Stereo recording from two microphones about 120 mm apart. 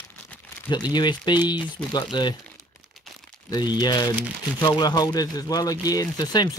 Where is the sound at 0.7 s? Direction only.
35° left (ahead or behind).